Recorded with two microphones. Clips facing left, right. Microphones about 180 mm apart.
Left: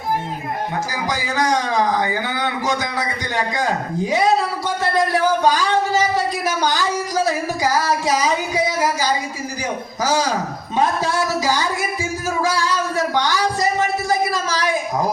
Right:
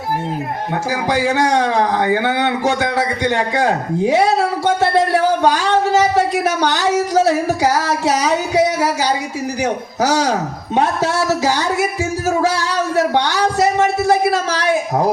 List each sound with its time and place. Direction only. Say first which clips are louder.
0.9 s speech: right 7 dB; 70° right (ahead or behind)